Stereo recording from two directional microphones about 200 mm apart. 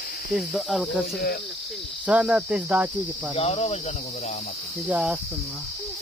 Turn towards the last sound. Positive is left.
turn(degrees=-5)  # may be behind; listen again after turning